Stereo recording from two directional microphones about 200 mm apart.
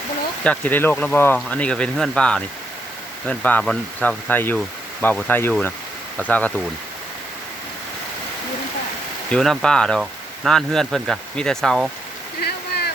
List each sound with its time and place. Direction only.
0.4 s speech: 5° left (ahead or behind)
9.3 s speech: centre (ahead or behind)
12.4 s a sound: 55° left (ahead or behind)